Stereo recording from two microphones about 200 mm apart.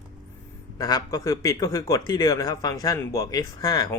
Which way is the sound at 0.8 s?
20° left (ahead or behind).